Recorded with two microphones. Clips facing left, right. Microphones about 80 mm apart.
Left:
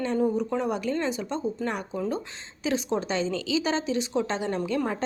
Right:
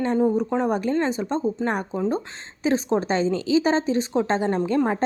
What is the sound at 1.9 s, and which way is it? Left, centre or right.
A woman's voice, right.